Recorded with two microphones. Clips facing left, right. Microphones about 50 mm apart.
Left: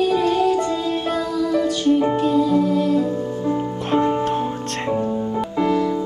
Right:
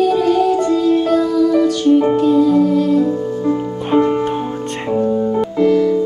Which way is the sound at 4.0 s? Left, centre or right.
Right.